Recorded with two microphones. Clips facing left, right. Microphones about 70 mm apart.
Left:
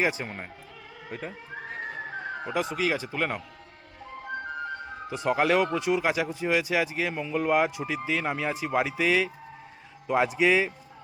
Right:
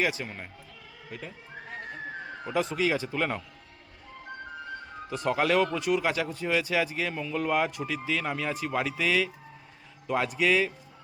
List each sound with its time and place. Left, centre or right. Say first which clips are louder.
0.0 s speech: left 2 dB; left
2.5 s speech: right 1 dB; centre
5.0 s speech: left 2 dB; centre